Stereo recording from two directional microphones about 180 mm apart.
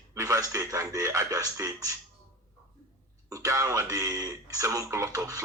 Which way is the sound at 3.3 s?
20° right (ahead or behind).